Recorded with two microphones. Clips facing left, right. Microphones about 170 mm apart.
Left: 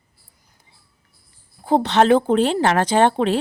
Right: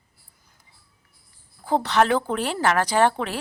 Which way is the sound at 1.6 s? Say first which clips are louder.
Left 4 dB; 20° left (ahead or behind).